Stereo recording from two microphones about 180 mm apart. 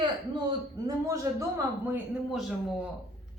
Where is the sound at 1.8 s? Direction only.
10° right (ahead or behind).